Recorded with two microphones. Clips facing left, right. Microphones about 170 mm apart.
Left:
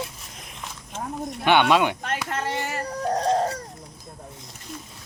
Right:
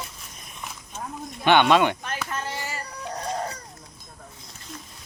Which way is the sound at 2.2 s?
60° left (ahead or behind).